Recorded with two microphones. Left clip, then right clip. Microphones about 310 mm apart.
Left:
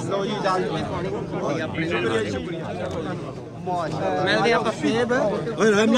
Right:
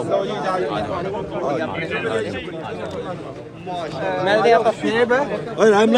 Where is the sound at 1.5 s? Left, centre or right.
Centre.